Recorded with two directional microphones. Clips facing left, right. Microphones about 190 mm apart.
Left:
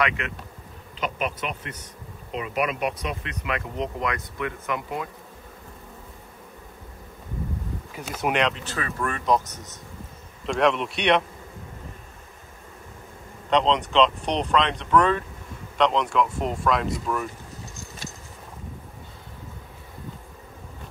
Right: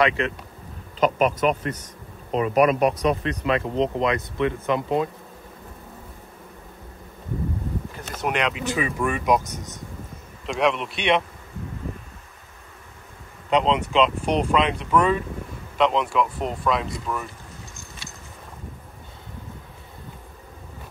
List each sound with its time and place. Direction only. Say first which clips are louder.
0.2 s speech: right 8 dB; 30° right (ahead or behind)
0.9 s speech: right 9 dB; 45° right (ahead or behind); by 5.1 s 25° right (ahead or behind)
7.9 s speech: left 3 dB; 5° left (ahead or behind); by 9.8 s 10° right (ahead or behind)
10.4 s speech: left 1 dB; centre (ahead or behind)
13.5 s speech: right 1 dB; 5° right (ahead or behind)